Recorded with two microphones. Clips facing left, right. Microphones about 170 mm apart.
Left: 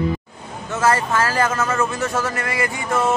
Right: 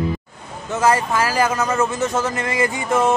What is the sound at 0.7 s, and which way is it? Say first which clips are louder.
A man's voice: right 1 dB; 15° right (ahead or behind).